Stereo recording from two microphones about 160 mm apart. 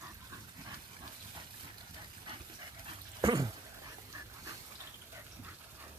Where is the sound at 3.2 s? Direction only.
25° right (ahead or behind).